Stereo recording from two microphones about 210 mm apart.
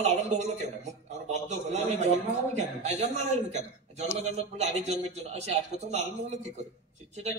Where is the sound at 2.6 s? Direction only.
30° right (ahead or behind).